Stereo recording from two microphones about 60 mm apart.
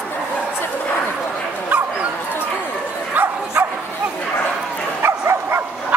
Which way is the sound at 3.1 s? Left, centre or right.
Right.